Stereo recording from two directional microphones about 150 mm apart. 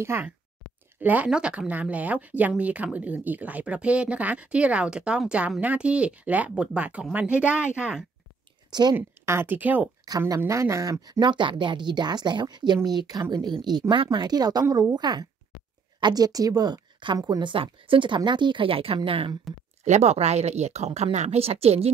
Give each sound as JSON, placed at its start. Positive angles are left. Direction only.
{"t": 0.0, "sound": "speech", "side_deg": -15}
{"t": 8.9, "sound": "speech", "side_deg": -15}
{"t": 10.0, "sound": "speech", "side_deg": -25}
{"t": 19.8, "sound": "speech", "side_deg": -50}